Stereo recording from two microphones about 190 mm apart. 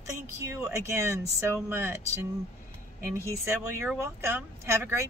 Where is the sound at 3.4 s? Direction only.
5° right (ahead or behind).